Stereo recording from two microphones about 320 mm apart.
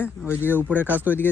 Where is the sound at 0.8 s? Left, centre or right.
Centre.